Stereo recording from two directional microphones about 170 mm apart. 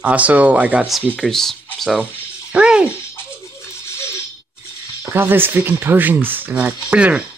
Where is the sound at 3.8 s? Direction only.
15° left (ahead or behind).